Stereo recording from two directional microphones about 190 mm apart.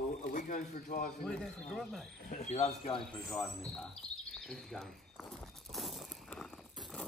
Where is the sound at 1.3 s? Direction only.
5° left (ahead or behind).